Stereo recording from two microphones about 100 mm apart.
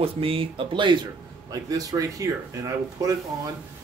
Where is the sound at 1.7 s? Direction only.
35° right (ahead or behind).